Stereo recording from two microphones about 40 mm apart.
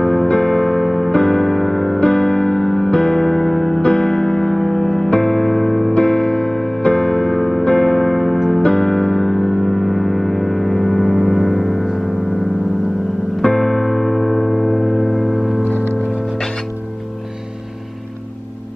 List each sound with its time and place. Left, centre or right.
0.0 s music: centre
2.0 s music: left
5.9 s music: centre
6.8 s music: left; by 12.0 s centre
13.4 s music: centre